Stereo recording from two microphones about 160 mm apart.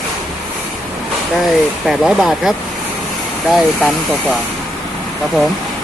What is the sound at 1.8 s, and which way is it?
Speech, centre (ahead or behind).